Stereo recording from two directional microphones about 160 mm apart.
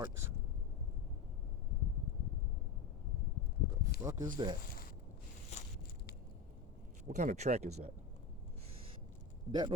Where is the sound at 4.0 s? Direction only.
20° right (ahead or behind).